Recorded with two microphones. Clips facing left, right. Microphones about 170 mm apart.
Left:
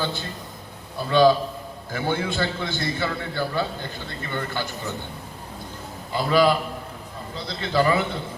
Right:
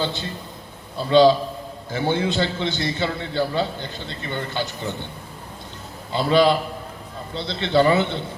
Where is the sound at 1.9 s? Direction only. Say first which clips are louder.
Right 4 dB; 20° right (ahead or behind).